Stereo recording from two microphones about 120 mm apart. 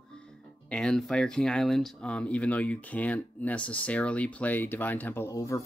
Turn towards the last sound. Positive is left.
turn(degrees=25)  # may be behind; listen again after turning